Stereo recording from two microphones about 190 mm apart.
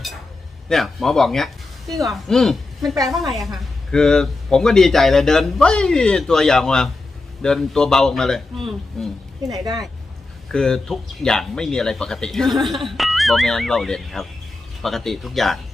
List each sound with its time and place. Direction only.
0.7 s speech: centre (ahead or behind)
2.9 s a woman's voice: 20° right (ahead or behind)
3.2 s speech: centre (ahead or behind)
10.5 s speech: 5° left (ahead or behind)